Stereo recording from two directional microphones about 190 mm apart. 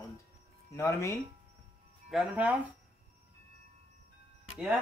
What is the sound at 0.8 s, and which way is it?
Speech, 15° left (ahead or behind).